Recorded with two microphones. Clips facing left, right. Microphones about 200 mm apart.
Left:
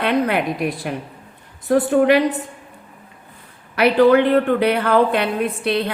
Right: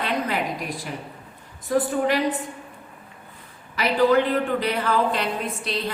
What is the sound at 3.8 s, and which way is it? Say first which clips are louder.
A woman's voice: left 6 dB; 65° left (ahead or behind).